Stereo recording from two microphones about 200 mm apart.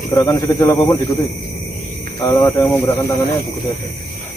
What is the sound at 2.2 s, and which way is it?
Speech, 20° left (ahead or behind).